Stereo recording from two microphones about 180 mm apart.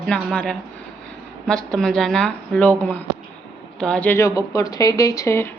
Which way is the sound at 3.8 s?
5° left (ahead or behind).